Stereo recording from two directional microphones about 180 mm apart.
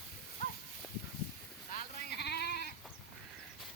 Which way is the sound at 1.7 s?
50° left (ahead or behind).